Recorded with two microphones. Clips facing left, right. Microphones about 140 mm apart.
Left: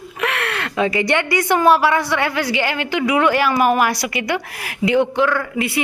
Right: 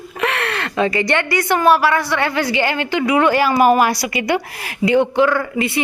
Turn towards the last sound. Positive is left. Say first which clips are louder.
# right 2 dB
turn(degrees=5)  # may be behind; listen again after turning